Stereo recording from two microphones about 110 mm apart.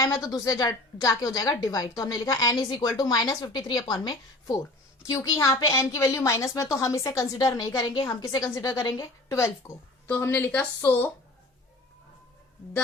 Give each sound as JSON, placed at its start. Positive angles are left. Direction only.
{"t": 0.0, "sound": "a woman's voice", "side_deg": 30}